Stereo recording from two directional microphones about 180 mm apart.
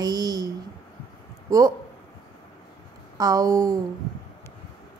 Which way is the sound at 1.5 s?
20° right (ahead or behind).